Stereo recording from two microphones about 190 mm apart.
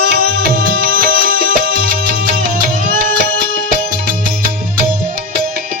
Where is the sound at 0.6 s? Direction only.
50° right (ahead or behind).